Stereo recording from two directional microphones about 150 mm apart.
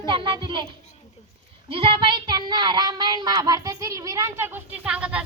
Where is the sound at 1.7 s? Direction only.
35° right (ahead or behind).